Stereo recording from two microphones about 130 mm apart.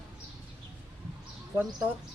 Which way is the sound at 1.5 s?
15° right (ahead or behind).